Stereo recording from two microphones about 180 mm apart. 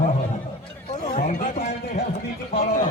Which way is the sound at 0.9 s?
45° left (ahead or behind).